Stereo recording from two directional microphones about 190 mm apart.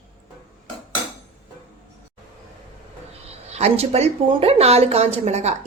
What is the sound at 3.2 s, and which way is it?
A woman's voice, 35° right (ahead or behind).